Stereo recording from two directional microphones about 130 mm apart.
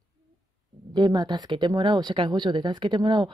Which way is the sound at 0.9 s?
35° right (ahead or behind).